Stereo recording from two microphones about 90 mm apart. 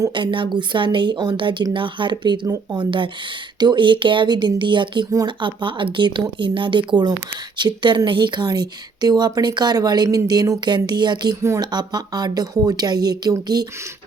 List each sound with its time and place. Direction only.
0.1 s a woman's voice: 60° right (ahead or behind); by 13.7 s 45° right (ahead or behind)